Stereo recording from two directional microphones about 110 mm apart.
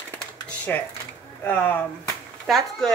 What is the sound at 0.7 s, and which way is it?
A woman's voice, 15° left (ahead or behind).